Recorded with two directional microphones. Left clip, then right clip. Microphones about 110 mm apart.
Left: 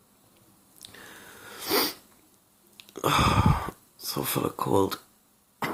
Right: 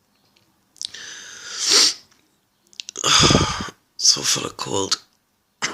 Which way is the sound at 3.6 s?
35° left (ahead or behind).